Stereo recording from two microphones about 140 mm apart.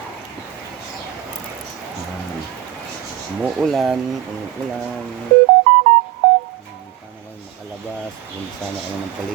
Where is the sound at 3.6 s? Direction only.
Centre (ahead or behind).